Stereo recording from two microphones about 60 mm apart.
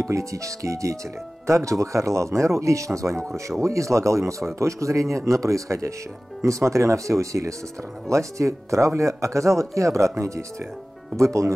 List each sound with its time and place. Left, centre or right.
0.0 s speech: right